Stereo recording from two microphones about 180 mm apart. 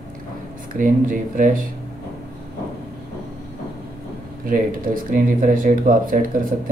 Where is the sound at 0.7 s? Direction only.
50° right (ahead or behind).